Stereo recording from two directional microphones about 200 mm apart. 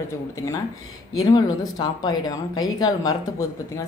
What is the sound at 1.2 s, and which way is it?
A woman's voice, 20° left (ahead or behind).